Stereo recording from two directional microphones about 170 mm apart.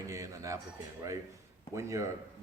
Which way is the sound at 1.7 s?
15° right (ahead or behind).